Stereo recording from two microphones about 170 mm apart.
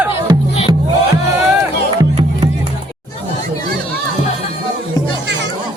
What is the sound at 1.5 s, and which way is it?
Music, 15° right (ahead or behind).